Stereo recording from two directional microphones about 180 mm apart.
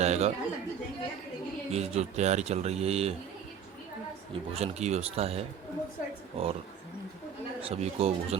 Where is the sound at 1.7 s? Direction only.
35° right (ahead or behind).